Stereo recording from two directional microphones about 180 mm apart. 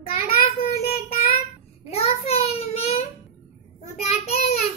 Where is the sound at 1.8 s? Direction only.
35° left (ahead or behind).